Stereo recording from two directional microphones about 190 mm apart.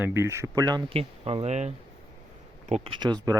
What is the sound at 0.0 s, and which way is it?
Speech, 15° right (ahead or behind).